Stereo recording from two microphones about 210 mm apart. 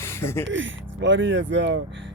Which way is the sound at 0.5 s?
60° right (ahead or behind).